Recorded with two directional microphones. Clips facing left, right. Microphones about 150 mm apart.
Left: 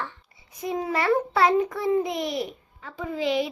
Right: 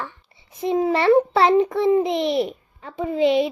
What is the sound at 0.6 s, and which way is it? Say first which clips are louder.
A child's voice: right 7 dB; 25° right (ahead or behind).